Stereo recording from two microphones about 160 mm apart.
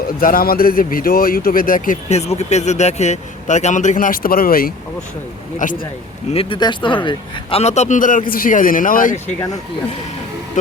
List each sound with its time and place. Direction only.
0.2 s speech: 60° left (ahead or behind)
5.5 s speech: 55° left (ahead or behind)
6.3 s speech: 35° left (ahead or behind)
7.6 s speech: 45° left (ahead or behind)